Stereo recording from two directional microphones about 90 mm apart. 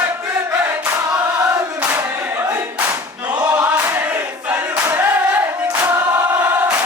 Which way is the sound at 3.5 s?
15° right (ahead or behind).